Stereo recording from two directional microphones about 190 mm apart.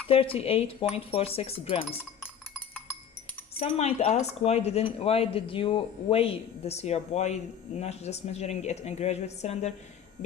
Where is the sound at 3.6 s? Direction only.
35° left (ahead or behind).